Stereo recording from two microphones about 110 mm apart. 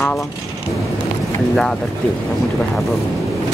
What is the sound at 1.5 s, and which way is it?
Speech, 10° left (ahead or behind).